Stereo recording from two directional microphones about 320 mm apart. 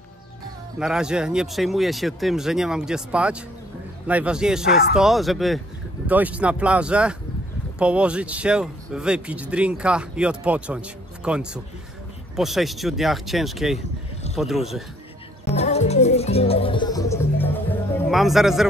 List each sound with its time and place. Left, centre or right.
0.7 s speech: centre
15.4 s music: centre